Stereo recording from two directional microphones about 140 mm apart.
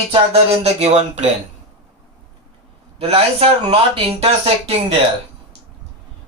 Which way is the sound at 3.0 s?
45° right (ahead or behind).